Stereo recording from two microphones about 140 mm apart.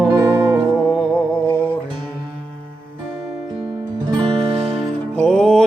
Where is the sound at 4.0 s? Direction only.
40° right (ahead or behind).